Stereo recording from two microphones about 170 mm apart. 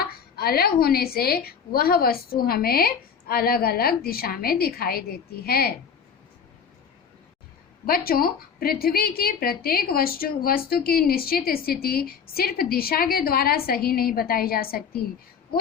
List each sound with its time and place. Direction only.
0.0 s a woman's voice: 65° left (ahead or behind)
7.9 s a woman's voice: 60° left (ahead or behind)